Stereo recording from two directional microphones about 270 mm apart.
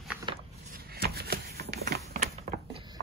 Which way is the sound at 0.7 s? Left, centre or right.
Right.